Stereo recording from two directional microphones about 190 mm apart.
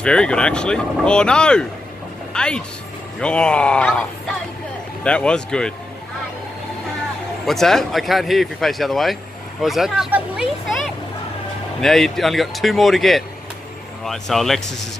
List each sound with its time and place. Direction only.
0.0 s speech: 5° left (ahead or behind)
7.4 s speech: centre (ahead or behind)